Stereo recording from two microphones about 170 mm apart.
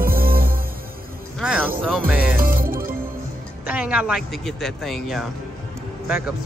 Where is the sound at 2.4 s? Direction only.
55° right (ahead or behind).